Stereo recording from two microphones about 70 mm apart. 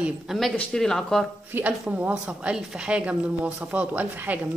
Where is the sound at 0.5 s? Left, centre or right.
Centre.